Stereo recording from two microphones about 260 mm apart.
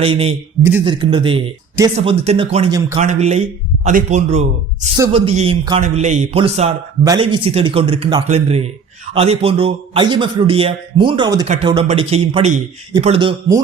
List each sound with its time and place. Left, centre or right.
0.0 s a man's voice: right